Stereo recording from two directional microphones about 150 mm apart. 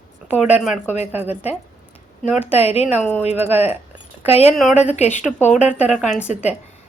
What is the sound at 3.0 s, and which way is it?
Speech, 10° left (ahead or behind).